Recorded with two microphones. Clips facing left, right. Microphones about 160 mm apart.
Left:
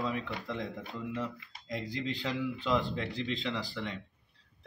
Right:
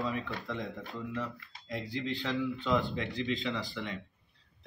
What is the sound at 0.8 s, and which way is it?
Speech, 20° left (ahead or behind).